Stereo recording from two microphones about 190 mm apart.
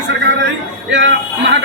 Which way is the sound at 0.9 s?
75° right (ahead or behind).